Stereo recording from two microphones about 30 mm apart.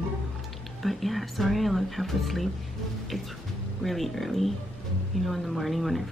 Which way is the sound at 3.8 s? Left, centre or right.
Centre.